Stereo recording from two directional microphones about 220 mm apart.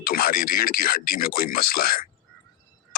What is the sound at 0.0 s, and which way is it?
Speech, 40° left (ahead or behind).